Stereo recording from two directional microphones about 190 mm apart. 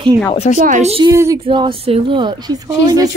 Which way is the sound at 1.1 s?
15° right (ahead or behind).